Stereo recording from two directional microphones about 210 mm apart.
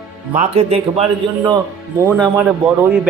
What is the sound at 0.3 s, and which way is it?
Speech, 30° right (ahead or behind).